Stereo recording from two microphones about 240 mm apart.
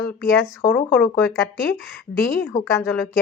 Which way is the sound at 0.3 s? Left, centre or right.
Centre.